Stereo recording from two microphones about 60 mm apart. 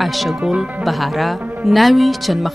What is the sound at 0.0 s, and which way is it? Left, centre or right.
Speech, centre.